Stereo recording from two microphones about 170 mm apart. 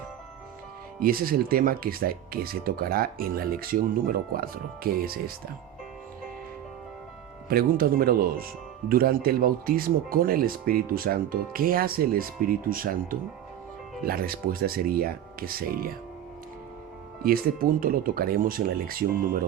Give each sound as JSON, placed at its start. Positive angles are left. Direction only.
{"t": 0.9, "sound": "speech", "side_deg": -60}
{"t": 7.4, "sound": "speech", "side_deg": -60}
{"t": 17.2, "sound": "speech", "side_deg": -60}